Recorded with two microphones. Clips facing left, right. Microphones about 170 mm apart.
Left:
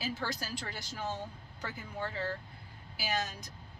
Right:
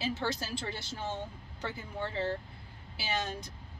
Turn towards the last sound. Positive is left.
turn(degrees=-25)  # may be behind; listen again after turning